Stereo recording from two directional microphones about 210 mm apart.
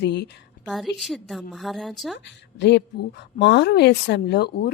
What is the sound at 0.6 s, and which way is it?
Speech, centre (ahead or behind).